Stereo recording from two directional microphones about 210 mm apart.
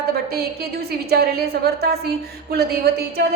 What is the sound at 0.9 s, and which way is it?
A woman's voice, 50° right (ahead or behind).